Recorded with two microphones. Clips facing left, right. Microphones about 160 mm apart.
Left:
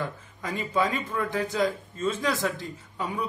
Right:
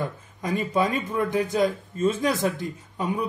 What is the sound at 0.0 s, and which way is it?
Speech, 15° right (ahead or behind).